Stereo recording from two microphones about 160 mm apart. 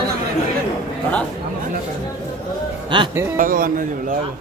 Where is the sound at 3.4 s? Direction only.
60° right (ahead or behind).